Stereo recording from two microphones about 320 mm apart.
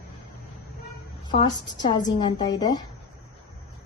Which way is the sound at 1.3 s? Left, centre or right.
Centre.